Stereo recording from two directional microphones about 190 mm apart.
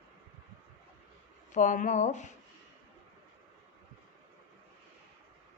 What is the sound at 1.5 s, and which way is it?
Speech, 40° left (ahead or behind).